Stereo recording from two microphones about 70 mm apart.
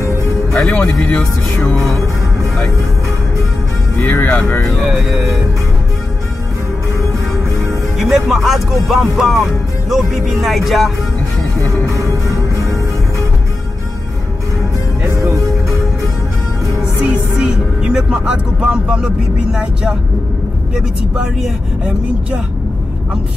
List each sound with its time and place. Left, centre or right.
0.5 s speech: centre
1.0 s speech: left
4.0 s speech: left
4.7 s speech: centre
8.0 s speech: centre
11.8 s music: right
15.0 s music: right
16.8 s music: centre
19.5 s speech: centre